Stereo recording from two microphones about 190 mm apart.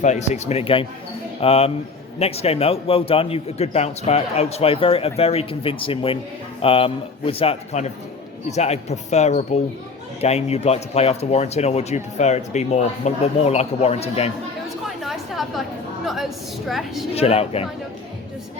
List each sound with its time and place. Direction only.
0.0 s speech: 35° left (ahead or behind)
14.8 s a sound: centre (ahead or behind)
16.0 s a woman's voice: centre (ahead or behind)
17.2 s speech: 30° left (ahead or behind)